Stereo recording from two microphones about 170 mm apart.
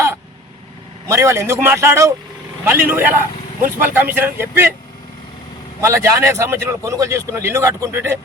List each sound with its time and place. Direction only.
1.0 s a man's voice: 15° right (ahead or behind)
5.8 s a man's voice: 15° right (ahead or behind)